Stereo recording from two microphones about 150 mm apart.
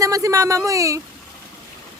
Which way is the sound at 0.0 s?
20° right (ahead or behind).